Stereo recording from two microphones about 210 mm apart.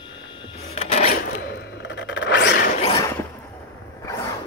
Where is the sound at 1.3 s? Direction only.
55° left (ahead or behind).